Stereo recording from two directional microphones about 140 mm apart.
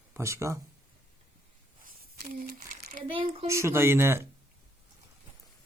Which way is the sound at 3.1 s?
40° right (ahead or behind).